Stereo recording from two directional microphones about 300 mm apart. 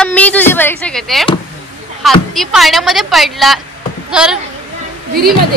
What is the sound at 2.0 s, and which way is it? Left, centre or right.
A woman's voice, centre.